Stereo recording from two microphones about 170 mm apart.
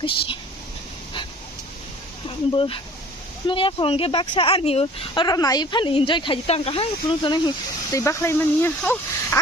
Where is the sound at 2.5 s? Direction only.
30° left (ahead or behind).